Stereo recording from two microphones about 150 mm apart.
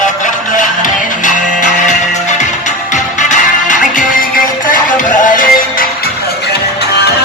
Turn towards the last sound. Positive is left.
turn(degrees=60)  # may be behind; listen again after turning